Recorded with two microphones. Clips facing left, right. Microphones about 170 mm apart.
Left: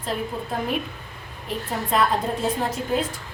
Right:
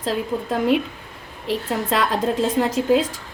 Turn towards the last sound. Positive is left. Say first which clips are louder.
# right 7 dB
turn(degrees=-90)